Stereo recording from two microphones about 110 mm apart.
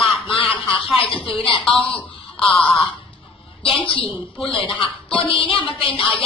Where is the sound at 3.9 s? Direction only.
50° left (ahead or behind).